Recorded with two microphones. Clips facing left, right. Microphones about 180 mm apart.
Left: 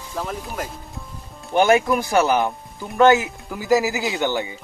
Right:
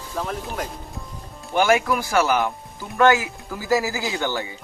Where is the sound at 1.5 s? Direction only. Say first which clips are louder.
Left 3 dB; 20° left (ahead or behind).